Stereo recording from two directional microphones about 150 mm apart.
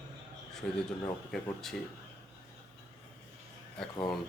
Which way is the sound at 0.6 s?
5° left (ahead or behind).